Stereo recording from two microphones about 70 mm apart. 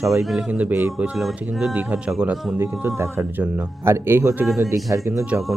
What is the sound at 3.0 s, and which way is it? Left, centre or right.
Speech, right.